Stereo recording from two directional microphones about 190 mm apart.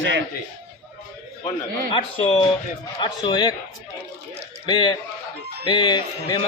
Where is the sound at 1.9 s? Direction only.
30° left (ahead or behind).